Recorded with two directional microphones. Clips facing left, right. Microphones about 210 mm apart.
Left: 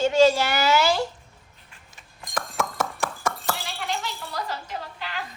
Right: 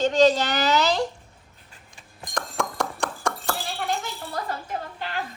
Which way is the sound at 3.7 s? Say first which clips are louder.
Right 2 dB; 50° right (ahead or behind).